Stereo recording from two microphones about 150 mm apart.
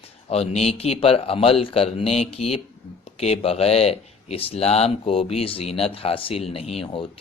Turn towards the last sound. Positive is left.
turn(degrees=35)  # may be behind; listen again after turning